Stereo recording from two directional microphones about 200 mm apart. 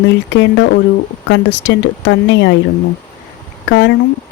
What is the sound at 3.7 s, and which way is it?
Speech, 65° left (ahead or behind).